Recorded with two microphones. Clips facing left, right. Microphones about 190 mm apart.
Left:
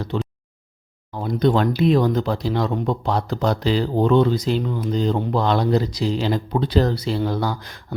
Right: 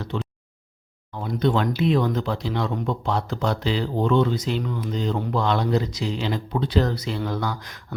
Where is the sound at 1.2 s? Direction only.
40° left (ahead or behind).